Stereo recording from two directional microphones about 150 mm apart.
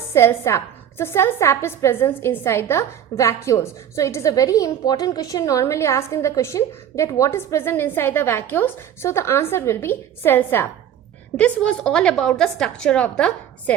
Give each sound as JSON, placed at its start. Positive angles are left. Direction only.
{"t": 0.1, "sound": "a woman's voice", "side_deg": 15}